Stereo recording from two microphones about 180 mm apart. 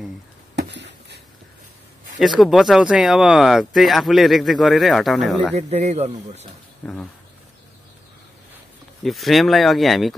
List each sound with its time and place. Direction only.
0.6 s a sound: 75° right (ahead or behind)
2.1 s speech: centre (ahead or behind)
5.6 s speech: 40° right (ahead or behind)
9.0 s speech: centre (ahead or behind)